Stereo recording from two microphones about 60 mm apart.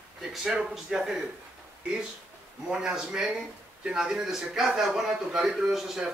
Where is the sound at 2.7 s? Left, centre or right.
Centre.